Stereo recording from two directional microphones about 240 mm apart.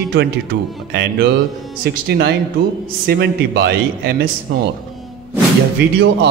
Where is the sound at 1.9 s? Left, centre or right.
Right.